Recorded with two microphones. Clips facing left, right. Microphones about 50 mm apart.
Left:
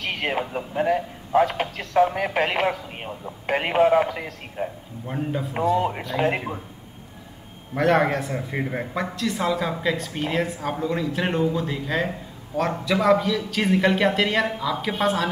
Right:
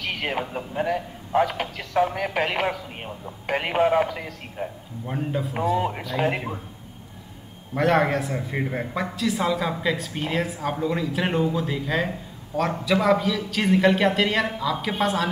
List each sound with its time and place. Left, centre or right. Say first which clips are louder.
0.0 s a man's voice: left 2 dB; centre
7.7 s a man's voice: left 1 dB; centre